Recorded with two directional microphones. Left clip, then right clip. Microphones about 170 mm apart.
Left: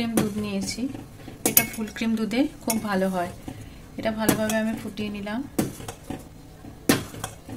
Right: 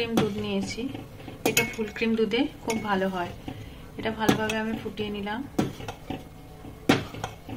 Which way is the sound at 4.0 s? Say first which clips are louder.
Left 1 dB; 90° left.